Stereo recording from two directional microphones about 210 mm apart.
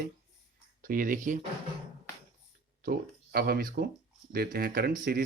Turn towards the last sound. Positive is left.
turn(degrees=-40)  # may be behind; listen again after turning